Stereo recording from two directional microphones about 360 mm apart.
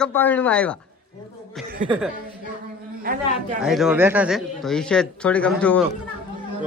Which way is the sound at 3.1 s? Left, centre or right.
Right.